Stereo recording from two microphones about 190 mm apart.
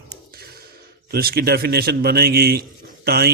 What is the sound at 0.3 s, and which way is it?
Sigh, 55° right (ahead or behind).